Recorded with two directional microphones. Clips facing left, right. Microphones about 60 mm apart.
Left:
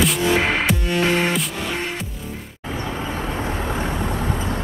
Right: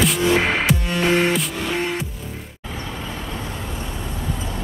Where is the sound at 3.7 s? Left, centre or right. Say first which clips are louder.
Left 6 dB; left.